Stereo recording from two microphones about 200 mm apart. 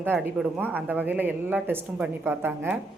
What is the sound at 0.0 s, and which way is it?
A woman's voice, 10° right (ahead or behind).